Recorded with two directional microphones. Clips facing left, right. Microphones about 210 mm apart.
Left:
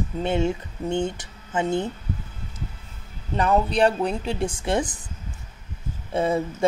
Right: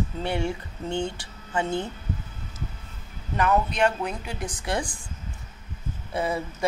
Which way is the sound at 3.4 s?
30° left (ahead or behind).